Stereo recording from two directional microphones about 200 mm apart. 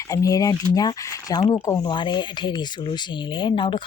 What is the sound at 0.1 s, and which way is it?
Speech, 15° left (ahead or behind).